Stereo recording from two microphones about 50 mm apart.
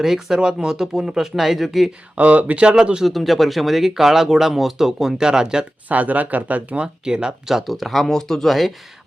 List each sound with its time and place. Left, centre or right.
0.0 s speech: centre
2.1 s speech: right
3.0 s speech: centre
5.9 s speech: right
6.8 s speech: centre